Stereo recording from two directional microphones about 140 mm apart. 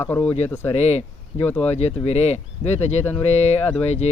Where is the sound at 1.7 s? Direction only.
50° left (ahead or behind).